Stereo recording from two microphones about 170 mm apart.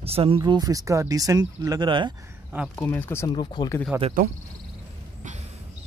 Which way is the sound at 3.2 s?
25° left (ahead or behind).